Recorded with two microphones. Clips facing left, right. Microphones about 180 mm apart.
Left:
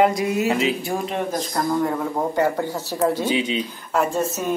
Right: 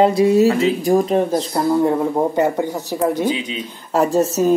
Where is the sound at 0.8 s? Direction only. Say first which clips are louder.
Right 9 dB; 40° right (ahead or behind).